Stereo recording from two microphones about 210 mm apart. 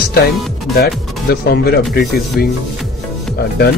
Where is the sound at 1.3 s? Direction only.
50° left (ahead or behind).